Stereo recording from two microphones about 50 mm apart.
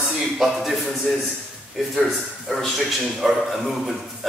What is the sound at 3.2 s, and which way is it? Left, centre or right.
A man's voice, centre.